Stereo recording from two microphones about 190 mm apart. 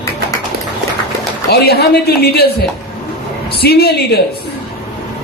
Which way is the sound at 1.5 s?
55° left (ahead or behind).